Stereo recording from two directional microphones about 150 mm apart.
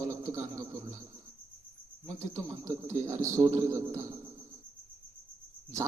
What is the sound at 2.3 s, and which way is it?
A man's voice, 20° right (ahead or behind).